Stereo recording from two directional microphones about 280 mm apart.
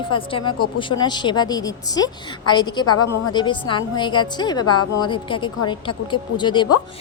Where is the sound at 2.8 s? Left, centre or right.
Left.